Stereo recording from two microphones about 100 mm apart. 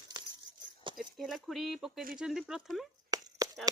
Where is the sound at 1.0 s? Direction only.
Centre (ahead or behind).